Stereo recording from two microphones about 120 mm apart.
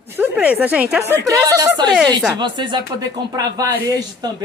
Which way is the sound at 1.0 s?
25° right (ahead or behind).